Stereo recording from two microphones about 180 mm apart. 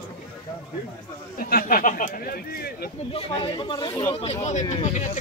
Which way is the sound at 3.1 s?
25° left (ahead or behind).